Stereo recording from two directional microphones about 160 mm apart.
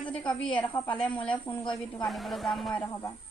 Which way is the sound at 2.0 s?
Centre (ahead or behind).